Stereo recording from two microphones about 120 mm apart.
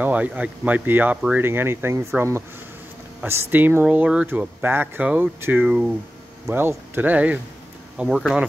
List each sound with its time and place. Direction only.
0.0 s speech: 10° right (ahead or behind)